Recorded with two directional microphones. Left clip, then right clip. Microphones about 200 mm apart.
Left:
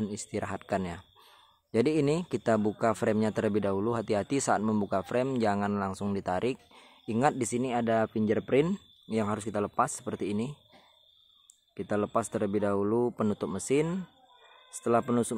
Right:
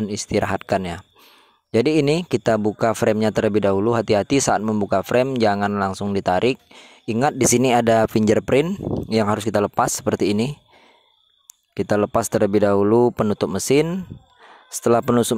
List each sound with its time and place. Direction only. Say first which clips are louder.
0.0 s speech: right 13 dB; 35° right (ahead or behind); by 8.6 s 50° right (ahead or behind)
8.6 s speech: right 11 dB; 40° right (ahead or behind)
11.7 s speech: right 10 dB; 45° right (ahead or behind)